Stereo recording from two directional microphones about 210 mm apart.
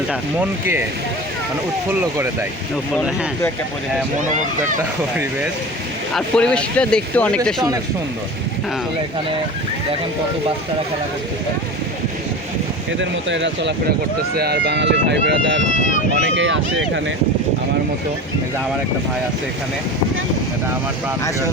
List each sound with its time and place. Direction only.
1.9 s speech: 10° right (ahead or behind)
6.1 s speech: 5° left (ahead or behind)
13.0 s speech: 60° right (ahead or behind)